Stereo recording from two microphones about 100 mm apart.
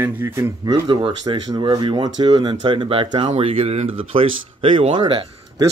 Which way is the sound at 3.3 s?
75° right (ahead or behind).